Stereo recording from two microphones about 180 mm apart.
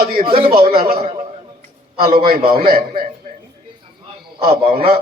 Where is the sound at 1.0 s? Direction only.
35° right (ahead or behind).